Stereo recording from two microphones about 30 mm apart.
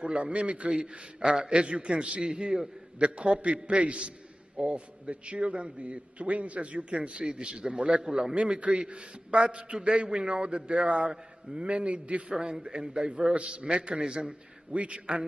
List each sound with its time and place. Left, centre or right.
0.0 s a man's voice: right
2.2 s a man's voice: right
3.0 s a man's voice: right
8.7 s a man's voice: right
12.3 s a man's voice: right
13.3 s a man's voice: right